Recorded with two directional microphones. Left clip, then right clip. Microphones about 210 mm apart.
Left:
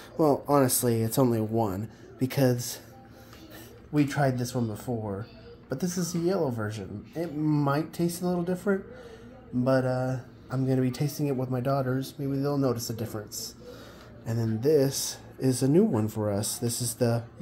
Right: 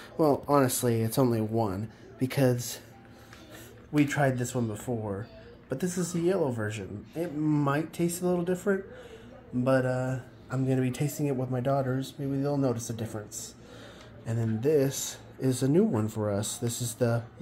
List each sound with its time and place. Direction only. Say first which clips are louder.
0.2 s speech: left 1 dB; 5° left (ahead or behind)
3.9 s speech: even; centre (ahead or behind)
14.2 s speech: left 2 dB; 5° left (ahead or behind)
16.4 s speech: left 2 dB; 35° left (ahead or behind)